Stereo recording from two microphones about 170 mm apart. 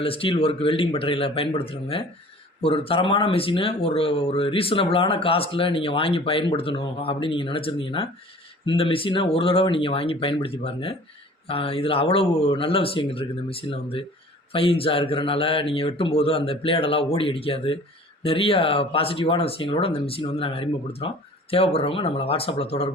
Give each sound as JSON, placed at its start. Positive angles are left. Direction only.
{"t": 0.0, "sound": "speech", "side_deg": 35}